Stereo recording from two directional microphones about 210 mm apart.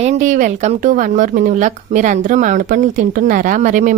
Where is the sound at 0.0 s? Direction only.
35° right (ahead or behind).